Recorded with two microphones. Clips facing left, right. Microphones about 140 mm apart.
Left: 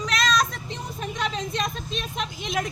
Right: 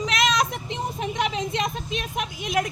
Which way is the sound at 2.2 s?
10° right (ahead or behind).